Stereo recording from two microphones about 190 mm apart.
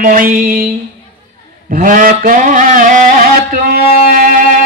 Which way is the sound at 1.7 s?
45° right (ahead or behind).